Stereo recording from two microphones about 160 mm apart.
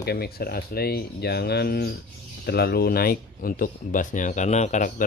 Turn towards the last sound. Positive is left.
turn(degrees=55)  # may be behind; listen again after turning